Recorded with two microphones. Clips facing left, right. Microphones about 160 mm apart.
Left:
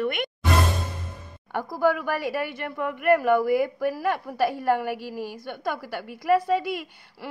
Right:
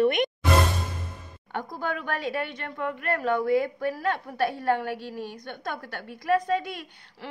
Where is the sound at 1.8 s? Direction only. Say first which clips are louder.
Left 8 dB; 10° left (ahead or behind).